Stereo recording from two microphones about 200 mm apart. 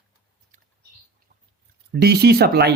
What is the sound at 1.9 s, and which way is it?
Speech, 55° right (ahead or behind).